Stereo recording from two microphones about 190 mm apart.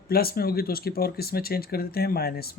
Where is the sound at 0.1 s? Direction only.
55° left (ahead or behind).